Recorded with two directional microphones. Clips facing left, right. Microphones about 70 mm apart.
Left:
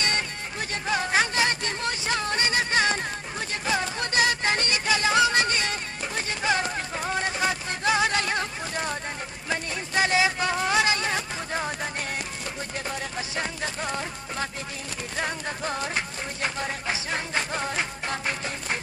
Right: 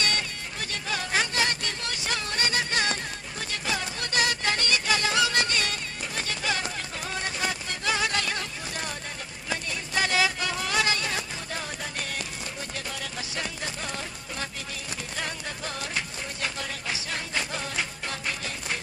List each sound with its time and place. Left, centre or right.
0.0 s music: left
10.0 s music: left
15.2 s music: left